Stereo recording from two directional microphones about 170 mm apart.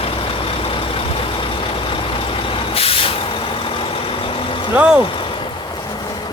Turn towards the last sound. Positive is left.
turn(degrees=-5)  # may be behind; listen again after turning